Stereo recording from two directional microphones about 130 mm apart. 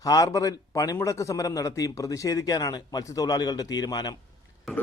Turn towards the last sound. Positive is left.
turn(degrees=30)  # may be behind; listen again after turning